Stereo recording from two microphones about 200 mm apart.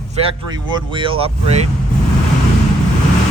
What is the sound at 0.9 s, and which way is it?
Speech, 25° right (ahead or behind).